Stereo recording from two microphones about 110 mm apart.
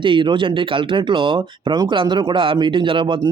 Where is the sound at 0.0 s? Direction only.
50° right (ahead or behind).